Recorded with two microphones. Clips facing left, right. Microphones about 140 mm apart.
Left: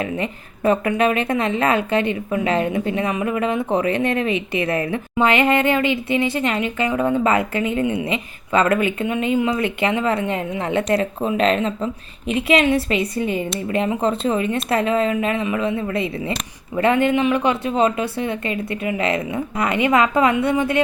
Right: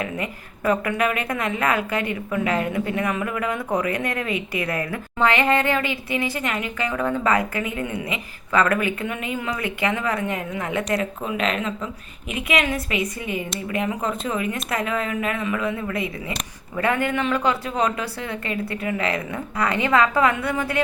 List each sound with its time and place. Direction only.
0.0 s speech: 25° left (ahead or behind)